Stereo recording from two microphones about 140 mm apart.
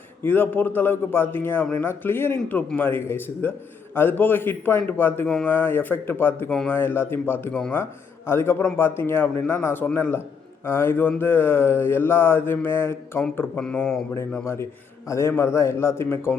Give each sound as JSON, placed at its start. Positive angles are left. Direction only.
{"t": 0.2, "sound": "a man's voice", "side_deg": 15}
{"t": 14.4, "sound": "a man's voice", "side_deg": 20}